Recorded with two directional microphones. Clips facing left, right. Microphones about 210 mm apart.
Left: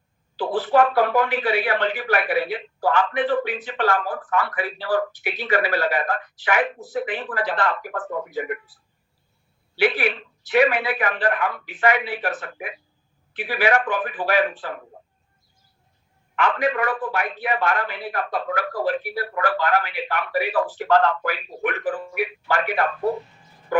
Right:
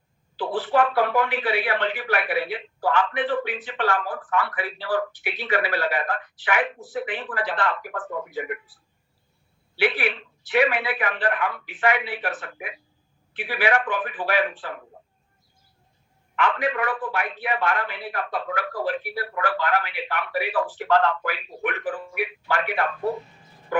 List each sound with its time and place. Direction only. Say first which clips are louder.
0.3 s speech: left 3 dB; 40° left (ahead or behind)
16.3 s speech: left 2 dB; 40° left (ahead or behind)